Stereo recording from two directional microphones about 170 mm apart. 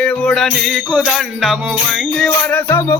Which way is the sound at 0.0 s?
5° left (ahead or behind).